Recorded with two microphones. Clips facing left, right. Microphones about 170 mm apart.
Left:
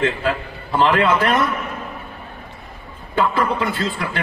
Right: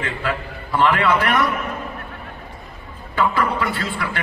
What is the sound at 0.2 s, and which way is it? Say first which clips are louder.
A man's voice: left 3 dB; 25° left (ahead or behind).